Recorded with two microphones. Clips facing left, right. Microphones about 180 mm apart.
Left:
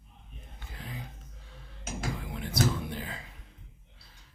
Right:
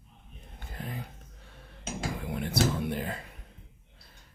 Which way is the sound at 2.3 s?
60° right (ahead or behind).